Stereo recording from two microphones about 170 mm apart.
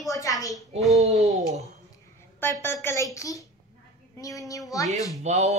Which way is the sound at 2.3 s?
15° left (ahead or behind).